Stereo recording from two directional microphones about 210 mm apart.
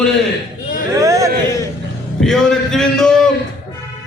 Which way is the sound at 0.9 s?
15° right (ahead or behind).